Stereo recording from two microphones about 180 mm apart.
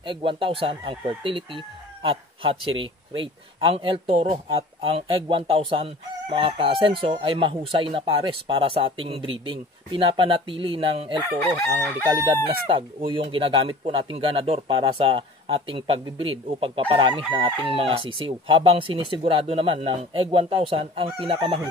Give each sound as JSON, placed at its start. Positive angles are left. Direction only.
{"t": 0.0, "sound": "speech", "side_deg": -30}
{"t": 12.4, "sound": "speech", "side_deg": -30}